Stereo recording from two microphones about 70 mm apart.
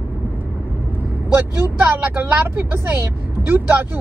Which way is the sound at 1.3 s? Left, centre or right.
Right.